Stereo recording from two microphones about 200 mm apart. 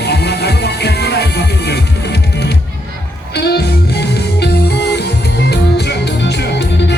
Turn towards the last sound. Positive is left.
turn(degrees=55)  # may be behind; listen again after turning